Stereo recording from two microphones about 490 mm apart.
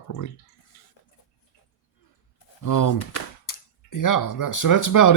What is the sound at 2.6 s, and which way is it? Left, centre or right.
Speech, left.